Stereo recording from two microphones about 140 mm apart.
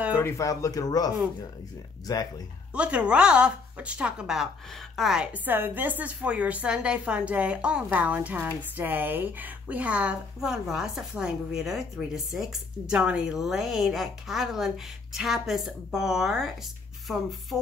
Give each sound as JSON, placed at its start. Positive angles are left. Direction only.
{"t": 0.2, "sound": "speech", "side_deg": 20}
{"t": 2.7, "sound": "a woman's voice", "side_deg": -10}